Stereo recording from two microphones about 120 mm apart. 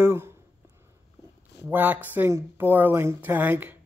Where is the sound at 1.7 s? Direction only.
15° right (ahead or behind).